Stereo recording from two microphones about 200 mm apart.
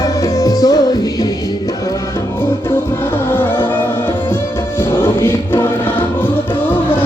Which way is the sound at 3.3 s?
10° left (ahead or behind).